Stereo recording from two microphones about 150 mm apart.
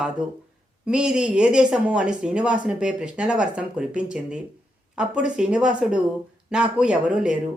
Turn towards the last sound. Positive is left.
turn(degrees=-5)  # may be behind; listen again after turning